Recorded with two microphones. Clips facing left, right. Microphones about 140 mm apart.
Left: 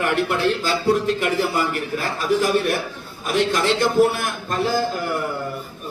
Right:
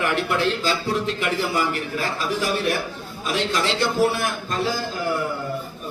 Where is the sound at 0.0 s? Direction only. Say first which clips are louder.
Left 2 dB; 50° left (ahead or behind).